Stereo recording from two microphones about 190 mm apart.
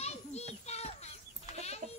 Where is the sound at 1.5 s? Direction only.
35° left (ahead or behind).